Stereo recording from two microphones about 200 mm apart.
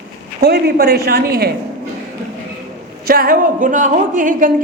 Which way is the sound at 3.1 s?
45° right (ahead or behind).